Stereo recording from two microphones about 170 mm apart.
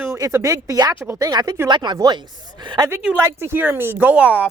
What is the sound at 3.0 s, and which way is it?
Speech, 10° right (ahead or behind).